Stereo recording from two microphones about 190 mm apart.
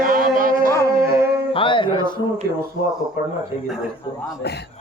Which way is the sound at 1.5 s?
25° left (ahead or behind).